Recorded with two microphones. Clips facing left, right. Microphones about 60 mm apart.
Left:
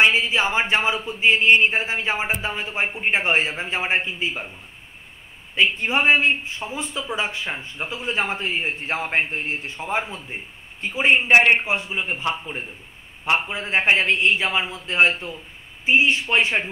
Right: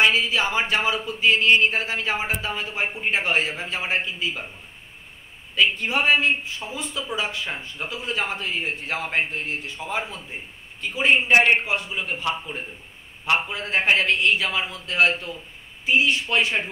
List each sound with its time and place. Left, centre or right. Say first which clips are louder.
0.0 s speech: left 2 dB; left
5.5 s speech: left 1 dB; left